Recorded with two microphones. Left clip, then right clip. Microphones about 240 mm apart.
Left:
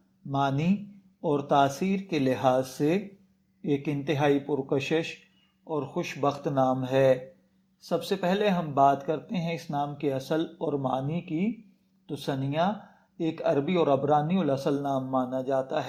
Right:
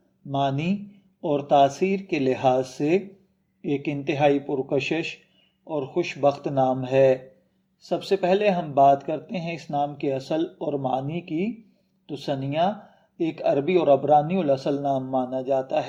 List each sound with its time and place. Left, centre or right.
0.3 s speech: left